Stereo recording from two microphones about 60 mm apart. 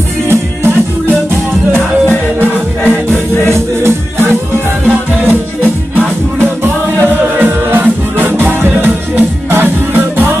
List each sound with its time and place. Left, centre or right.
0.3 s music: right
3.1 s music: right
4.8 s music: right